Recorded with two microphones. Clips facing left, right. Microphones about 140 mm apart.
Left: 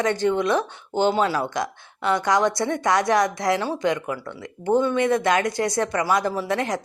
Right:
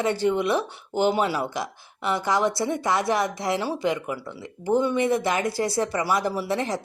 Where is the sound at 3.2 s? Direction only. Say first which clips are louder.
Left 4 dB; 30° right (ahead or behind).